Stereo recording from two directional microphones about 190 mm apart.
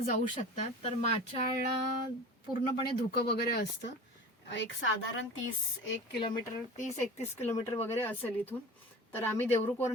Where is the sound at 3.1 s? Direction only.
60° left (ahead or behind).